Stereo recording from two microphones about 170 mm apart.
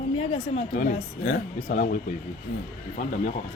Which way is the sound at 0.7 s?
50° left (ahead or behind).